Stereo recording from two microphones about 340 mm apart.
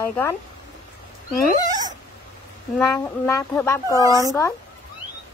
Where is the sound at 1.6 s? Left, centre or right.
Centre.